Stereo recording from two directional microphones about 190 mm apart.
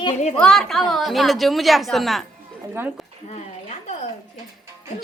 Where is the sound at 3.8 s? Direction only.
35° left (ahead or behind).